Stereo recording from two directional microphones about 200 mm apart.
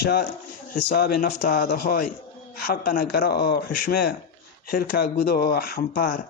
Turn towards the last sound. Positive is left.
turn(degrees=45)  # may be behind; listen again after turning